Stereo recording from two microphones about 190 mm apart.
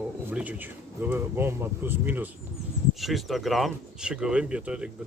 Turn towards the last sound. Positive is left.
turn(degrees=-5)  # may be behind; listen again after turning